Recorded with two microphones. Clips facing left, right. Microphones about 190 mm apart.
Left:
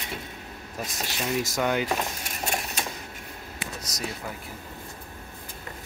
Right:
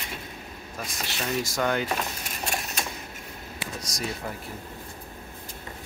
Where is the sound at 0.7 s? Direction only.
15° left (ahead or behind).